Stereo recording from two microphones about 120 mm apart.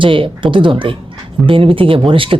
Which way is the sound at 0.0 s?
45° right (ahead or behind).